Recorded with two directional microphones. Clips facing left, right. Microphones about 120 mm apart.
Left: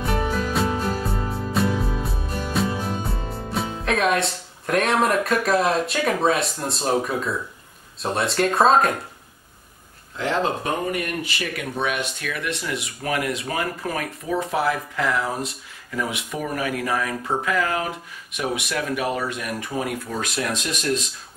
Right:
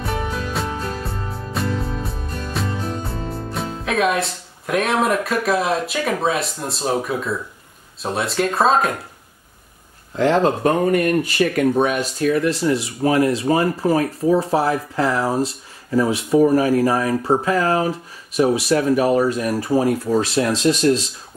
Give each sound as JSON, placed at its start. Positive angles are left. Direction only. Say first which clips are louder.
{"t": 0.2, "sound": "music", "louder": "left 2 dB", "side_deg": 5}
{"t": 3.8, "sound": "speech", "louder": "right 2 dB", "side_deg": 0}
{"t": 10.1, "sound": "speech", "louder": "right 7 dB", "side_deg": -40}